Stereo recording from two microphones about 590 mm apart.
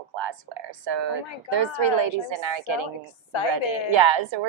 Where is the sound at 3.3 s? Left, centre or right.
Left.